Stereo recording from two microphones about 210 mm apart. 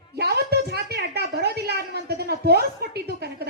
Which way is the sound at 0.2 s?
50° right (ahead or behind).